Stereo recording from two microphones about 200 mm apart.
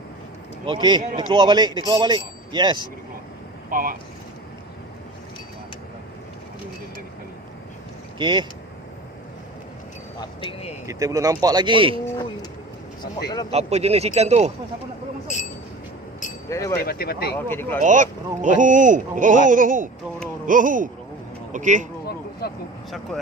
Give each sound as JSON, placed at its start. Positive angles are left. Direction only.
{"t": 0.6, "sound": "speech", "side_deg": -25}
{"t": 3.7, "sound": "speech", "side_deg": -45}
{"t": 8.2, "sound": "speech", "side_deg": -20}
{"t": 10.2, "sound": "speech", "side_deg": 30}
{"t": 10.8, "sound": "speech", "side_deg": -15}
{"t": 13.5, "sound": "speech", "side_deg": -30}
{"t": 16.5, "sound": "speech", "side_deg": 15}
{"t": 16.8, "sound": "speech", "side_deg": 50}
{"t": 17.3, "sound": "speech", "side_deg": 10}
{"t": 17.7, "sound": "speech", "side_deg": -40}
{"t": 22.0, "sound": "a sound", "side_deg": 50}